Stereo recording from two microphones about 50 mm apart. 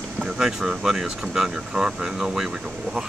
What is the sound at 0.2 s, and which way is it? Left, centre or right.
Speech, centre.